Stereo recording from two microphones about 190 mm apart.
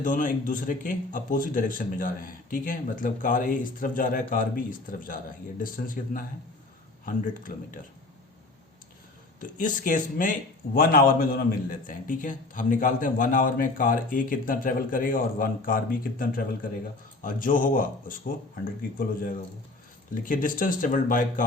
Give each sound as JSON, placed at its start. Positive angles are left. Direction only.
{"t": 0.0, "sound": "speech", "side_deg": 45}
{"t": 9.4, "sound": "speech", "side_deg": 45}